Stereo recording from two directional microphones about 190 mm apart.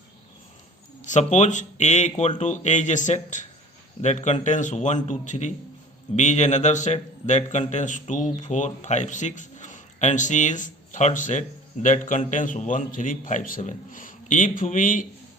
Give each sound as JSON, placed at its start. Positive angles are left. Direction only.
{"t": 1.0, "sound": "a man's voice", "side_deg": 40}